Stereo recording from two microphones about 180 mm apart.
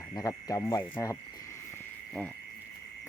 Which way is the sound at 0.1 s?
20° left (ahead or behind).